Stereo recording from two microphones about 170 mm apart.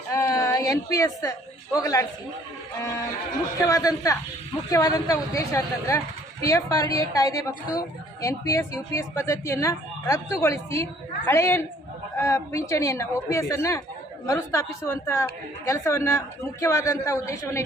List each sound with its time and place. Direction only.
0.1 s a woman's voice: 20° left (ahead or behind)
3.7 s a woman's voice: 20° left (ahead or behind)